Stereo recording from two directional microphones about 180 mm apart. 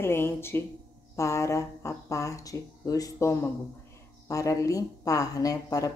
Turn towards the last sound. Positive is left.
turn(degrees=20)  # may be behind; listen again after turning